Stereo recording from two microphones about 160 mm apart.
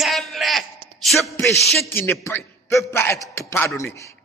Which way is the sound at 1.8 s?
15° left (ahead or behind).